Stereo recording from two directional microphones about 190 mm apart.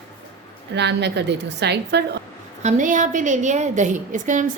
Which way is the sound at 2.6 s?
40° right (ahead or behind).